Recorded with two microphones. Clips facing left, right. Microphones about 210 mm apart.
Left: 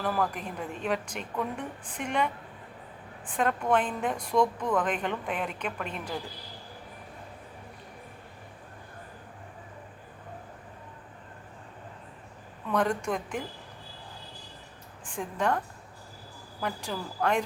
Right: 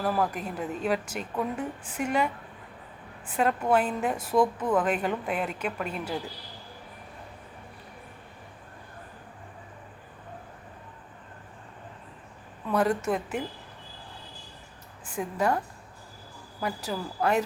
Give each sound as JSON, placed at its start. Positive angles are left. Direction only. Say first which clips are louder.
{"t": 0.0, "sound": "a woman's voice", "louder": "right 2 dB", "side_deg": -5}
{"t": 12.7, "sound": "a woman's voice", "louder": "right 2 dB", "side_deg": -5}
{"t": 15.0, "sound": "a woman's voice", "louder": "right 2 dB", "side_deg": -5}